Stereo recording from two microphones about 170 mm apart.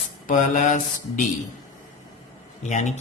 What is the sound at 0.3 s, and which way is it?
Speech, 45° left (ahead or behind).